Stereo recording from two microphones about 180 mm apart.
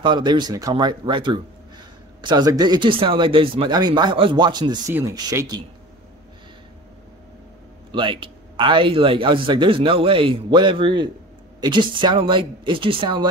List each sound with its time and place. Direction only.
0.0 s speech: 25° right (ahead or behind)
7.9 s speech: 25° right (ahead or behind)